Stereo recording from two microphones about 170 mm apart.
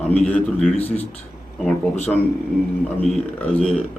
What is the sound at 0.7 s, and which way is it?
Speech, 35° left (ahead or behind).